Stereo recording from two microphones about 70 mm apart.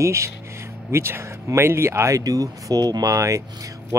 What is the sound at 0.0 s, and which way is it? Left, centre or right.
Speech, right.